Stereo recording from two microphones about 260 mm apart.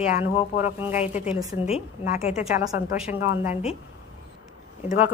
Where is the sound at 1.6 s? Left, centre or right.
Left.